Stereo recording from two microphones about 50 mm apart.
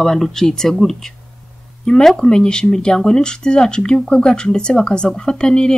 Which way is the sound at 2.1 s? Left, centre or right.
Centre.